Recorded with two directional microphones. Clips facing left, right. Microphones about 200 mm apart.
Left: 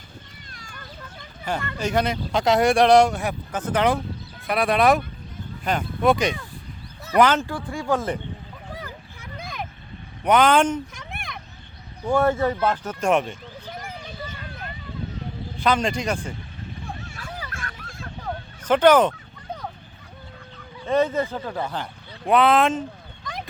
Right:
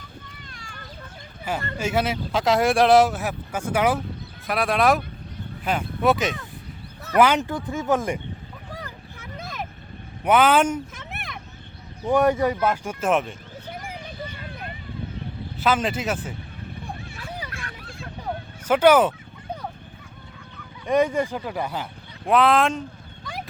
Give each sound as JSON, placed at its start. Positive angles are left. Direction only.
{"t": 1.8, "sound": "speech", "side_deg": -5}
{"t": 7.4, "sound": "speech", "side_deg": -20}
{"t": 8.8, "sound": "a sound", "side_deg": 0}
{"t": 10.2, "sound": "speech", "side_deg": -5}
{"t": 12.0, "sound": "speech", "side_deg": -15}
{"t": 15.6, "sound": "speech", "side_deg": -5}
{"t": 17.5, "sound": "vehicle", "side_deg": 45}
{"t": 18.3, "sound": "vehicle", "side_deg": -10}
{"t": 20.8, "sound": "speech", "side_deg": -15}
{"t": 22.3, "sound": "speech", "side_deg": 0}